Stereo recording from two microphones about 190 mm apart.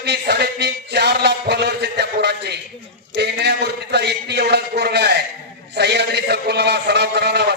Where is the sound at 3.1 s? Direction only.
60° right (ahead or behind).